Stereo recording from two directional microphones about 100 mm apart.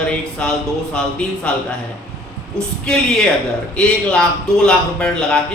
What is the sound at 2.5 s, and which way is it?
Speech, 10° left (ahead or behind).